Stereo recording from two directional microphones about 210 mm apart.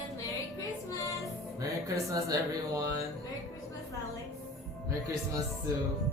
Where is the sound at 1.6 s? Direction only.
15° right (ahead or behind).